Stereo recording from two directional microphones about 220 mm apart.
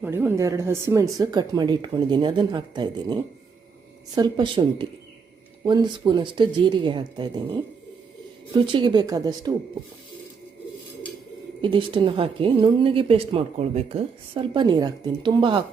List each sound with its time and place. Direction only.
0.0 s a woman's voice: 10° right (ahead or behind)
8.6 s speech: 20° right (ahead or behind)
11.6 s a woman's voice: 20° right (ahead or behind)